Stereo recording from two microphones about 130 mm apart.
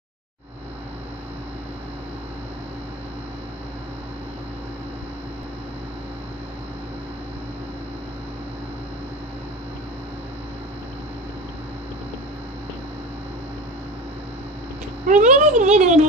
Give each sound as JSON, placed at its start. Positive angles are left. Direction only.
{"t": 15.0, "sound": "speech", "side_deg": -70}